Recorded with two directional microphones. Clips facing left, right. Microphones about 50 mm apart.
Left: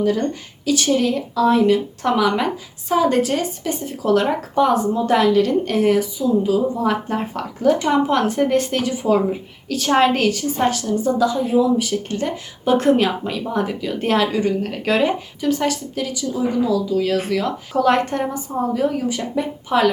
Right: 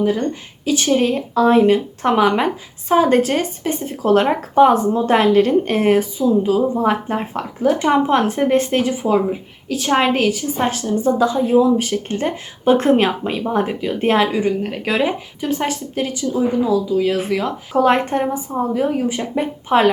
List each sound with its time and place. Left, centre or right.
0.6 s a woman's voice: right
6.8 s speech: right
9.6 s a woman's voice: centre
10.7 s speech: right